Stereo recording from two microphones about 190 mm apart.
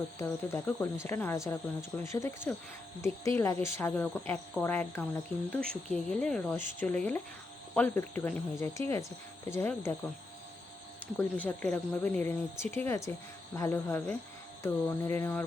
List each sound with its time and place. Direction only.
0.2 s speech: 15° left (ahead or behind)
11.2 s speech: 10° left (ahead or behind)